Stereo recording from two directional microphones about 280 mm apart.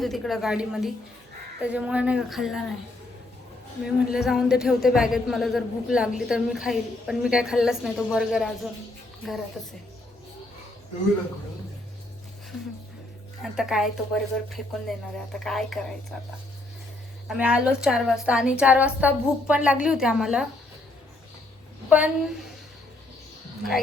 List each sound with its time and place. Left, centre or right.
0.0 s speech: centre
3.8 s speech: centre
13.4 s speech: centre
17.2 s speech: centre
21.8 s a woman's voice: centre